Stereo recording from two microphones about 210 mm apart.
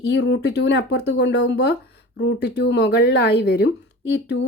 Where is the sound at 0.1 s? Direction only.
55° left (ahead or behind).